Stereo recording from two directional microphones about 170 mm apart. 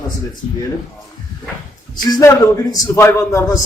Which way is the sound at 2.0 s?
25° left (ahead or behind).